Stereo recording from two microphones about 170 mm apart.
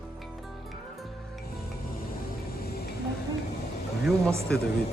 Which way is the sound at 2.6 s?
65° left (ahead or behind).